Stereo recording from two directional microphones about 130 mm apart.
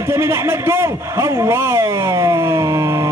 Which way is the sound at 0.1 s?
20° right (ahead or behind).